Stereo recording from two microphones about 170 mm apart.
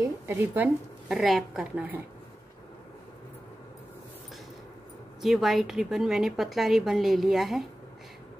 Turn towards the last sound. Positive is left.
turn(degrees=0)  # may be behind; listen again after turning